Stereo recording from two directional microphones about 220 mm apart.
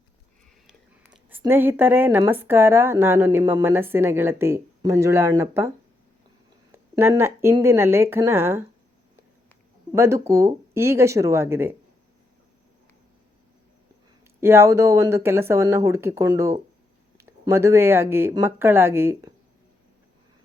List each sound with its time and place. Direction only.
0.7 s speech: 5° right (ahead or behind)
9.9 s speech: 15° right (ahead or behind)
14.4 s speech: 10° right (ahead or behind)